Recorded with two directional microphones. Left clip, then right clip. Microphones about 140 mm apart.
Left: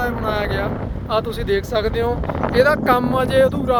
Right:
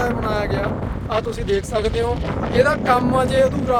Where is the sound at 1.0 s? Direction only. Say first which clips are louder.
Left 2 dB; 20° left (ahead or behind).